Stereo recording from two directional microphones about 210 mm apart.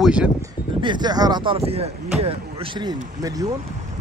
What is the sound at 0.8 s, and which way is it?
Speech, 20° right (ahead or behind).